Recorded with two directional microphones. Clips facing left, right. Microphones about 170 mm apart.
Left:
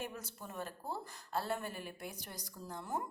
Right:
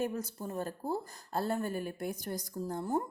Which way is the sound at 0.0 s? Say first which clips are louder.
Right 10 dB; 40° right (ahead or behind).